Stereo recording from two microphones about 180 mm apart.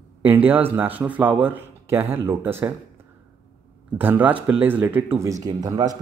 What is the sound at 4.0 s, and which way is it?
Speech, 10° right (ahead or behind).